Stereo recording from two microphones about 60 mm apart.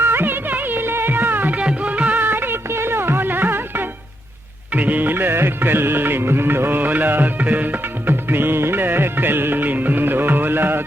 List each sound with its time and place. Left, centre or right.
0.0 s music: right
1.5 s music: right
2.1 s music: right